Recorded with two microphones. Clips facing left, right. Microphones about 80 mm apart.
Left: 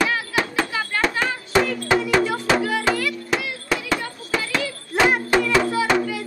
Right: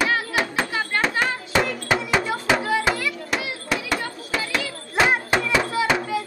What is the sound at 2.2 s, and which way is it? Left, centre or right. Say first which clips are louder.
Music: left 2 dB; right.